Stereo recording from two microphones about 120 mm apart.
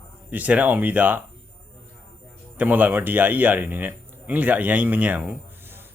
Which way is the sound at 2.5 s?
15° right (ahead or behind).